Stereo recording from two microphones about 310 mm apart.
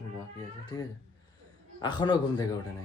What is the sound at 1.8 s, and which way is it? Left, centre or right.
Speech, centre.